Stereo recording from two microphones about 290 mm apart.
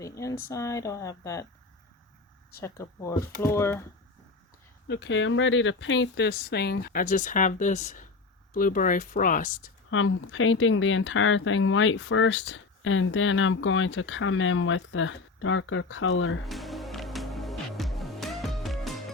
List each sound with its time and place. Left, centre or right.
0.5 s speech: centre
2.6 s speech: centre
4.9 s speech: left
9.9 s speech: left
16.5 s music: centre